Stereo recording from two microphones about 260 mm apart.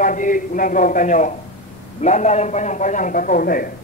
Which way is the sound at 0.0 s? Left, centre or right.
Left.